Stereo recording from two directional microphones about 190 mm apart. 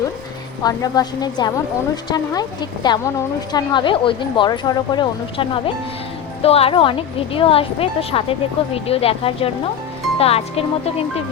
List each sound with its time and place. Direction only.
0.6 s a woman's voice: 20° left (ahead or behind)